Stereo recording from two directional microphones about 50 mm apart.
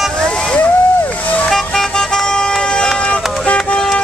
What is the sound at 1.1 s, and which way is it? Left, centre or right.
Vehicle, left.